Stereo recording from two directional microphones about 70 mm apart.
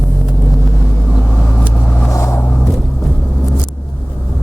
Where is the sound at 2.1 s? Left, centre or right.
Left.